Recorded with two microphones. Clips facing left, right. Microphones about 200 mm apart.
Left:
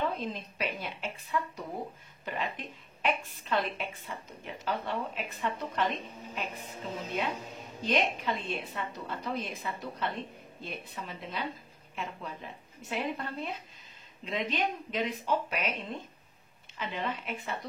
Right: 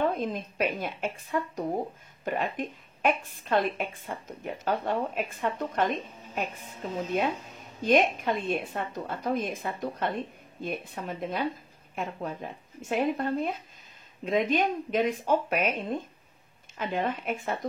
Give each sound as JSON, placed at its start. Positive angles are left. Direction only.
{"t": 0.0, "sound": "a woman's voice", "side_deg": -50}